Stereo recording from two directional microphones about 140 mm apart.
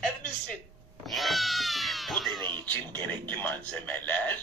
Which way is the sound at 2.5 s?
15° left (ahead or behind).